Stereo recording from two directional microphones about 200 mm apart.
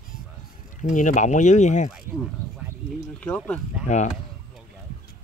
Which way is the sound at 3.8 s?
35° left (ahead or behind).